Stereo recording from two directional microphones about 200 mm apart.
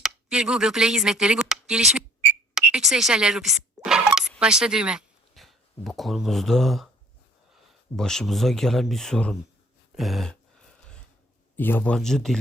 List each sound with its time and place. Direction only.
0.0 s speech: 5° right (ahead or behind)
7.9 s speech: centre (ahead or behind)
9.9 s a sound: centre (ahead or behind)
11.5 s speech: 10° left (ahead or behind)